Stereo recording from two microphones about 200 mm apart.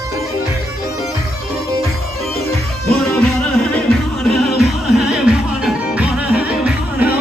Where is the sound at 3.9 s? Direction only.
Centre (ahead or behind).